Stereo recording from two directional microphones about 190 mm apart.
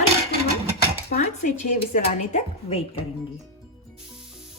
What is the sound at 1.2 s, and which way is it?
A woman's voice, 40° left (ahead or behind).